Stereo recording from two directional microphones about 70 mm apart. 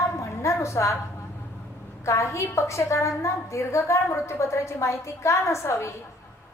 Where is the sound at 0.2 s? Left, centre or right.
Left.